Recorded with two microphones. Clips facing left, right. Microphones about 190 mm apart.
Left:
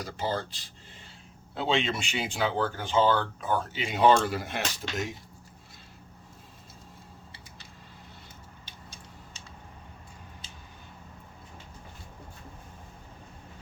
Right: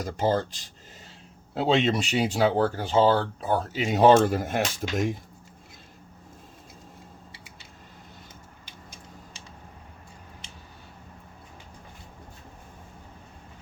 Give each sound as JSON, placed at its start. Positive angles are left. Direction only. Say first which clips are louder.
{"t": 0.0, "sound": "speech", "louder": "right 7 dB", "side_deg": -45}